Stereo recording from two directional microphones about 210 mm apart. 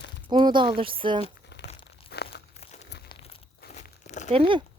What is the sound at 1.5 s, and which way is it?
Crumpling, 55° left (ahead or behind).